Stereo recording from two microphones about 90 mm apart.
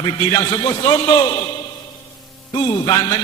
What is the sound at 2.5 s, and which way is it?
Speech, 50° left (ahead or behind).